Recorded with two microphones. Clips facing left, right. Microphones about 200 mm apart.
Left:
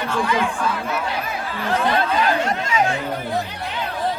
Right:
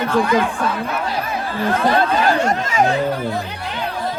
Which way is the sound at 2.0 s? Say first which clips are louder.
Right 3 dB; 45° right (ahead or behind).